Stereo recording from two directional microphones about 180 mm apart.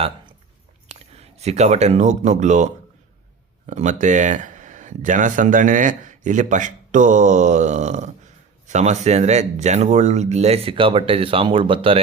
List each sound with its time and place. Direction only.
0.9 s speech: 35° right (ahead or behind)